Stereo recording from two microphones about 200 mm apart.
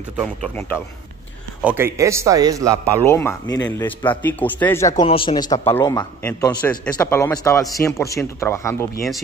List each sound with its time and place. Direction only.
0.2 s a man's voice: 5° left (ahead or behind)
1.6 s a man's voice: 10° right (ahead or behind)
2.8 s speech: 10° left (ahead or behind)
5.0 s speech: 25° left (ahead or behind)